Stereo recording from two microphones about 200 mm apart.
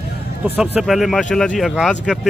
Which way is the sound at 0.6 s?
5° right (ahead or behind).